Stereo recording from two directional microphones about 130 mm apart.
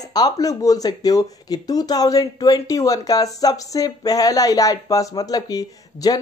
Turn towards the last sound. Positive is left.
turn(degrees=30)  # may be behind; listen again after turning